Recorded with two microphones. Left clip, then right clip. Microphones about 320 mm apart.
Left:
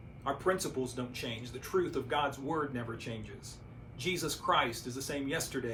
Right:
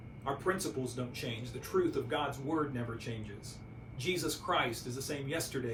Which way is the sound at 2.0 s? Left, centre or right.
Centre.